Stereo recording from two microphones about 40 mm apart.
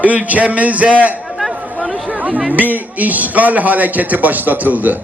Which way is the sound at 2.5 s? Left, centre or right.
Right.